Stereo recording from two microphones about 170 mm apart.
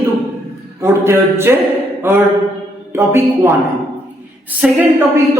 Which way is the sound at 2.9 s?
15° right (ahead or behind).